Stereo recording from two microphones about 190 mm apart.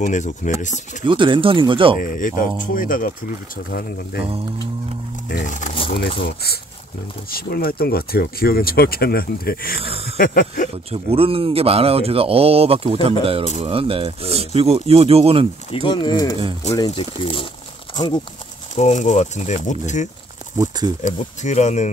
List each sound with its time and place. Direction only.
0.0 s speech: 40° left (ahead or behind)
1.0 s speech: 25° right (ahead or behind)
2.0 s speech: 45° left (ahead or behind)
5.3 s speech: 45° left (ahead or behind)
5.9 s speech: 60° left (ahead or behind)
9.8 s speech: 30° right (ahead or behind)
10.1 s speech: 50° left (ahead or behind)
10.9 s speech: 30° right (ahead or behind)
15.7 s speech: 25° left (ahead or behind)
18.8 s speech: 40° left (ahead or behind)
20.5 s speech: 20° right (ahead or behind)
21.0 s speech: 40° left (ahead or behind)